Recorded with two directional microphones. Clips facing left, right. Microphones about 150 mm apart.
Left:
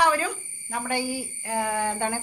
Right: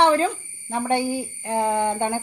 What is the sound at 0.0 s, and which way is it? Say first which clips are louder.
A woman's voice: right 5 dB; 25° right (ahead or behind).